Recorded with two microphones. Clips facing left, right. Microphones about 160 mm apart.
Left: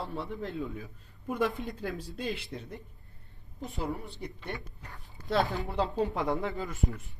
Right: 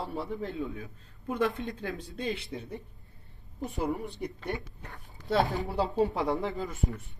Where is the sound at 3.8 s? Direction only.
20° right (ahead or behind).